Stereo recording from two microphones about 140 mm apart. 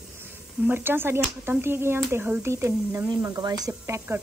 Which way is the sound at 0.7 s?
15° right (ahead or behind).